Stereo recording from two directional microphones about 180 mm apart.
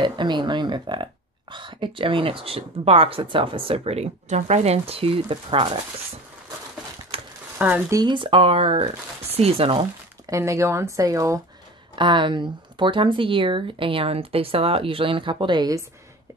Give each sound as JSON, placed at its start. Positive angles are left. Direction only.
{"t": 0.0, "sound": "speech", "side_deg": -25}
{"t": 7.1, "sound": "mechanisms", "side_deg": -30}
{"t": 7.5, "sound": "speech", "side_deg": -10}
{"t": 8.0, "sound": "speech", "side_deg": -25}
{"t": 10.3, "sound": "speech", "side_deg": -15}